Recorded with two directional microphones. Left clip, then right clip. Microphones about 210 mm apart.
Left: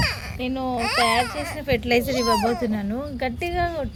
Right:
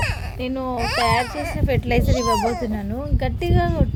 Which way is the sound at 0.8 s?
35° right (ahead or behind).